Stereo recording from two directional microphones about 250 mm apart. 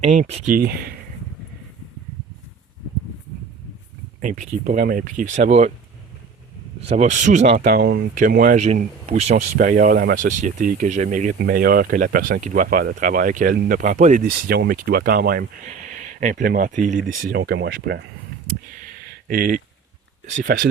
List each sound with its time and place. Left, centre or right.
0.0 s speech: right
0.5 s speech: right
4.2 s speech: right
6.8 s speech: right
19.3 s speech: right